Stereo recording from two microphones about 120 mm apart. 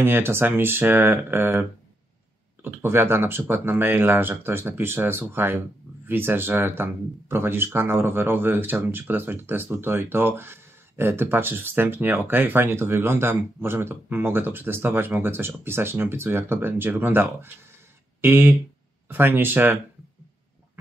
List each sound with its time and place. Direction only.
0.0 s speech: 20° right (ahead or behind)
2.6 s speech: 20° right (ahead or behind)